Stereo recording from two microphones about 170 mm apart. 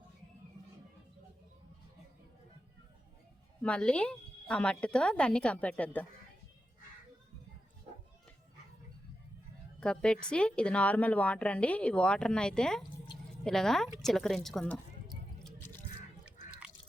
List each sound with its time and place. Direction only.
3.6 s a woman's voice: 5° left (ahead or behind)
9.8 s a woman's voice: 5° left (ahead or behind)